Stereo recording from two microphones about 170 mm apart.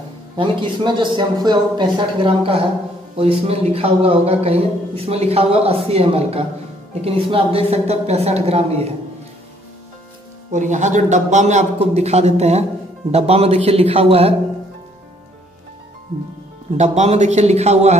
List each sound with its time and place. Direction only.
0.4 s a man's voice: 30° right (ahead or behind)
10.5 s a man's voice: 45° right (ahead or behind)
16.7 s speech: 40° right (ahead or behind)